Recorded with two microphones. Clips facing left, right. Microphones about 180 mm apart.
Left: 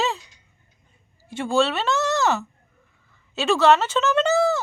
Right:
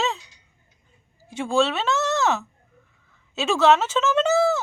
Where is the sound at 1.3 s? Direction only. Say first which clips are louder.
Even; centre (ahead or behind).